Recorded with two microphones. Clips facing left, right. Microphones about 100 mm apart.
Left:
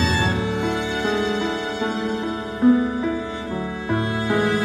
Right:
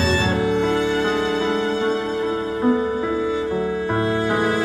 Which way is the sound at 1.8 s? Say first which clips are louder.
Right 3 dB; 25° right (ahead or behind).